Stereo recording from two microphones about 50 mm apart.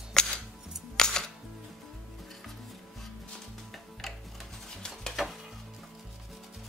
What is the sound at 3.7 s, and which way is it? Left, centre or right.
Music, centre.